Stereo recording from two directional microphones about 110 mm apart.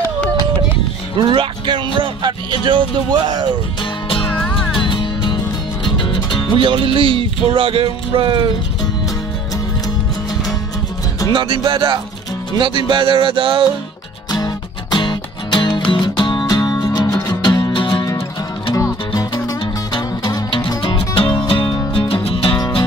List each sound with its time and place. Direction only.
1.1 s speech: 50° right (ahead or behind)
4.1 s music: 50° left (ahead or behind)
6.5 s speech: 50° right (ahead or behind)
11.3 s speech: 50° right (ahead or behind)
14.3 s music: 40° left (ahead or behind)
19.9 s music: 50° left (ahead or behind)